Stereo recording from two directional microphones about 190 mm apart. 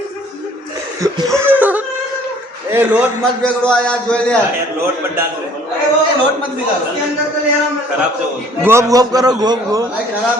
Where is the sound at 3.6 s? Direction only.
5° left (ahead or behind).